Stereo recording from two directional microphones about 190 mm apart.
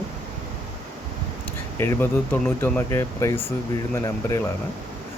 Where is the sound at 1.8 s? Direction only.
10° left (ahead or behind).